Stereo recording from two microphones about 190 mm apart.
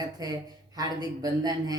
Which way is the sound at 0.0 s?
20° right (ahead or behind).